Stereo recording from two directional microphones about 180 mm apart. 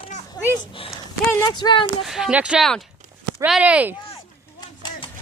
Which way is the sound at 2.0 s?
5° right (ahead or behind).